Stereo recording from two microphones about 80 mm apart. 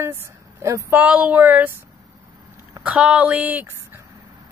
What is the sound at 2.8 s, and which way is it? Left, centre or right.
Speech, centre.